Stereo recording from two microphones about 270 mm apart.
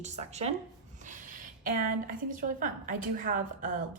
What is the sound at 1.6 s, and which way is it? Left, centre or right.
A woman's voice, right.